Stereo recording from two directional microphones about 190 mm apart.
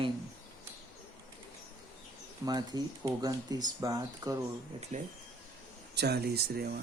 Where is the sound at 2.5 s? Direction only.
20° right (ahead or behind).